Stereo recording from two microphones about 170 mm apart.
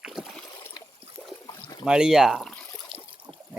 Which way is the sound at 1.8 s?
5° right (ahead or behind).